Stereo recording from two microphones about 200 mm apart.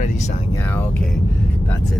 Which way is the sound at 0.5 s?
10° left (ahead or behind).